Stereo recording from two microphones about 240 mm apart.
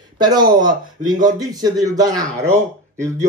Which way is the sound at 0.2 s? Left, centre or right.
Centre.